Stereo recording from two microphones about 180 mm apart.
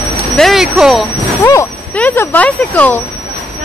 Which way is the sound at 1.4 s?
10° left (ahead or behind).